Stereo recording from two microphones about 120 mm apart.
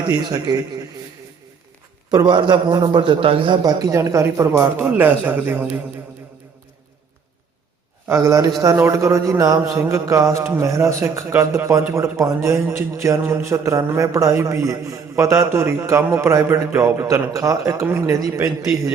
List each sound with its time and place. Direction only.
0.0 s a man's voice: 35° right (ahead or behind)
2.0 s a man's voice: 35° right (ahead or behind)
3.6 s a man's voice: 30° right (ahead or behind); by 5.8 s 15° right (ahead or behind)
8.0 s a man's voice: 25° right (ahead or behind)